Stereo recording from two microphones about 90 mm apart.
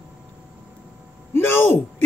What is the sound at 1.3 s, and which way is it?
Speech, 25° left (ahead or behind).